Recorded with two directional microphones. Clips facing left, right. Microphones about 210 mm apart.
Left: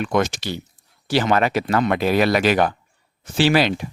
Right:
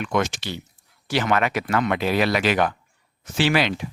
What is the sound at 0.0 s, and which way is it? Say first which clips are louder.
Speech: left 3 dB; 35° left (ahead or behind).